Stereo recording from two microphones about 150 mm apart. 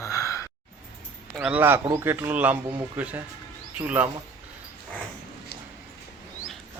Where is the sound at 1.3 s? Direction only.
5° right (ahead or behind).